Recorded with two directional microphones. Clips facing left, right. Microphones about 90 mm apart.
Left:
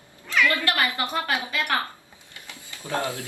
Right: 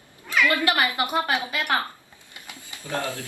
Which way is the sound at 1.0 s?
20° right (ahead or behind).